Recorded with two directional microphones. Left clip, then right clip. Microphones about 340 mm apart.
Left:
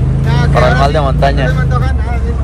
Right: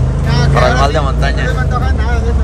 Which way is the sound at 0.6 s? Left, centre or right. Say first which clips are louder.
Left 2 dB; centre.